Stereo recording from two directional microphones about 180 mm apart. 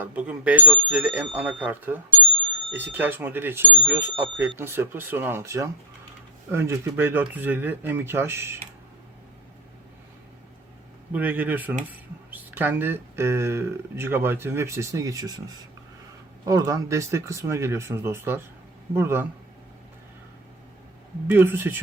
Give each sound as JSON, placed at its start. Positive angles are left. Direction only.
{"t": 0.0, "sound": "speech", "side_deg": -5}
{"t": 11.1, "sound": "speech", "side_deg": -10}
{"t": 16.5, "sound": "speech", "side_deg": -20}
{"t": 21.2, "sound": "speech", "side_deg": -10}